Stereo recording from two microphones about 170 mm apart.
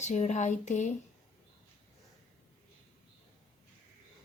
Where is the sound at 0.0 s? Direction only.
45° left (ahead or behind).